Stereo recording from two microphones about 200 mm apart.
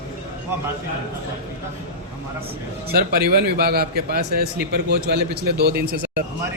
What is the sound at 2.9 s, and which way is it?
A man's voice, 50° right (ahead or behind).